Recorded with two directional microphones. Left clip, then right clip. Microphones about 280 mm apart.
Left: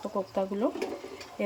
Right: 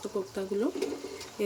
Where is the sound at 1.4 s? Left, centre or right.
Centre.